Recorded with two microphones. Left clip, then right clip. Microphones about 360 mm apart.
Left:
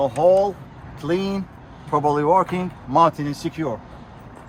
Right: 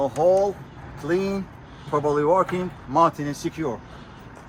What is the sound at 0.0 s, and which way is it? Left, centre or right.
Speech, left.